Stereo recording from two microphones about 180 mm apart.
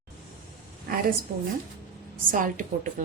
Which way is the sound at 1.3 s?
55° right (ahead or behind).